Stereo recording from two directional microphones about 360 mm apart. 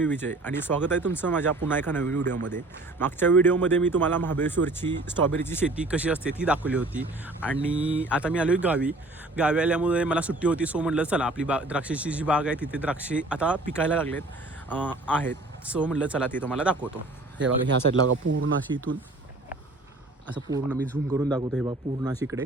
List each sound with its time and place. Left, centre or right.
0.0 s a man's voice: centre
18.3 s speech: right
20.2 s speech: centre